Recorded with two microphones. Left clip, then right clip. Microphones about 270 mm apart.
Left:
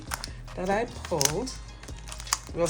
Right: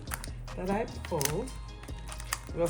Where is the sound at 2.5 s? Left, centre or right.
Centre.